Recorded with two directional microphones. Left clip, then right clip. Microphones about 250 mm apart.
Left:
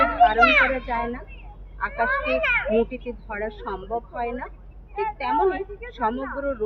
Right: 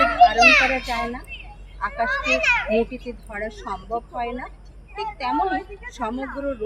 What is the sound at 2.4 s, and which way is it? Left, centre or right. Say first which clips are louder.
Speech: right 2 dB; centre.